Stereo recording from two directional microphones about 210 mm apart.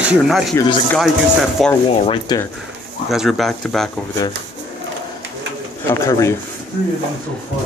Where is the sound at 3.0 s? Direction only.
Centre (ahead or behind).